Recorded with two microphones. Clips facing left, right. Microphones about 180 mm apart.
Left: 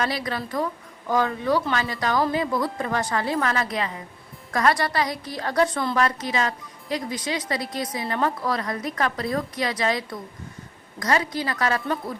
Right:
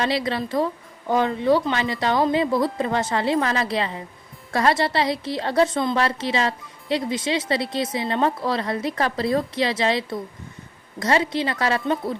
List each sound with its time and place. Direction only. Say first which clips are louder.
0.0 s a woman's voice: right 4 dB; 25° right (ahead or behind)